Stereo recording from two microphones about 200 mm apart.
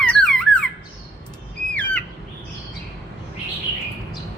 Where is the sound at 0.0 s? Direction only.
5° left (ahead or behind).